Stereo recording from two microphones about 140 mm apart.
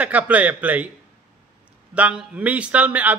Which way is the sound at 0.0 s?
10° right (ahead or behind).